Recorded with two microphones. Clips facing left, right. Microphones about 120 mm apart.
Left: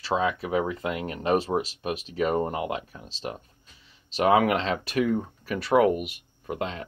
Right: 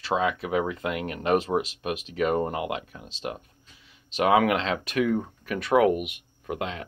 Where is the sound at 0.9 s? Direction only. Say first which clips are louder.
Even; 30° left (ahead or behind).